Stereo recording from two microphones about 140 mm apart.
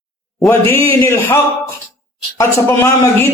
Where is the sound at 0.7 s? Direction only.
15° left (ahead or behind).